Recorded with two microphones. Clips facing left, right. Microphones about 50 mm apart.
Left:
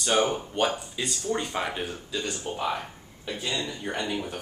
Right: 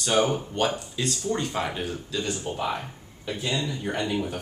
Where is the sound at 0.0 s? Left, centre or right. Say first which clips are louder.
Right 1 dB; centre.